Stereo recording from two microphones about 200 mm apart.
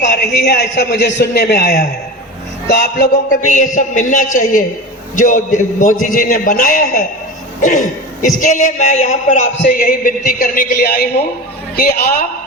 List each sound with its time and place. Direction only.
0.0 s a man's voice: 55° left (ahead or behind)
3.4 s a man's voice: 40° left (ahead or behind)